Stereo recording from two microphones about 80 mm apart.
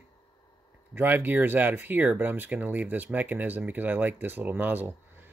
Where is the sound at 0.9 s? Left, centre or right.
Right.